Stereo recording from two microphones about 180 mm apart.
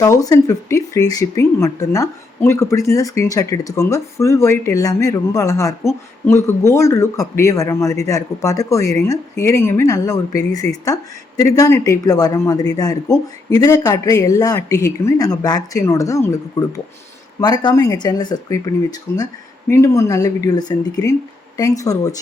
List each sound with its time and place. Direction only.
0.0 s speech: 20° left (ahead or behind)